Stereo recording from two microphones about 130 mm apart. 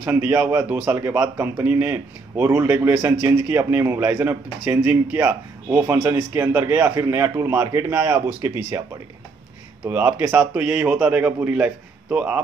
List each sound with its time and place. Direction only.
0.0 s a man's voice: 15° right (ahead or behind)
9.8 s speech: 15° right (ahead or behind)